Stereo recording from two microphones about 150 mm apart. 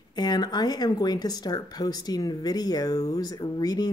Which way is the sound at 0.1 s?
25° left (ahead or behind).